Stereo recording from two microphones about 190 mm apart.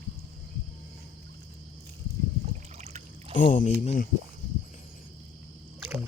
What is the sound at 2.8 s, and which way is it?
Trickle, 35° right (ahead or behind).